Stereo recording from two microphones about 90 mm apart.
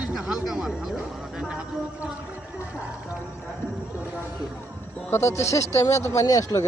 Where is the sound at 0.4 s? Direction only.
5° right (ahead or behind).